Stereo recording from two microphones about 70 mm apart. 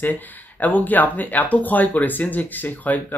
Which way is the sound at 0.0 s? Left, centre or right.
Left.